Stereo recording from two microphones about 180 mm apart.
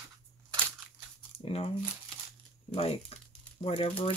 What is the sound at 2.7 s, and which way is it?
Speech, 35° left (ahead or behind).